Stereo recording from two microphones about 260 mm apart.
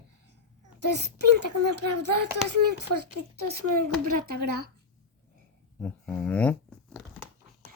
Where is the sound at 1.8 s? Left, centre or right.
Right.